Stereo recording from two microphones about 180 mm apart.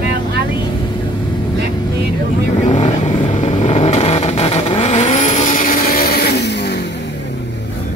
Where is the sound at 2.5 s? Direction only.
40° left (ahead or behind); by 6.8 s 70° left (ahead or behind).